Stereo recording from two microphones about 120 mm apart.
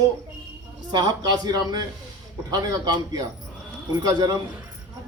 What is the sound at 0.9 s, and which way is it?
A man's voice, 35° right (ahead or behind).